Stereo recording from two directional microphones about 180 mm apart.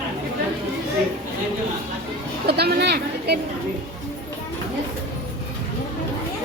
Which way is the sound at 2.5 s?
60° right (ahead or behind).